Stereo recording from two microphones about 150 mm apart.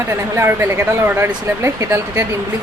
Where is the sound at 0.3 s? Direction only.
15° right (ahead or behind).